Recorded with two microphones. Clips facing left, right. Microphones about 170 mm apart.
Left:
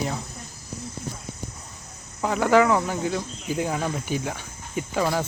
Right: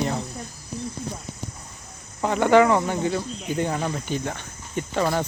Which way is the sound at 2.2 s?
Centre (ahead or behind).